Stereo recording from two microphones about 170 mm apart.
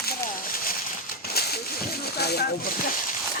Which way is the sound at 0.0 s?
60° left (ahead or behind).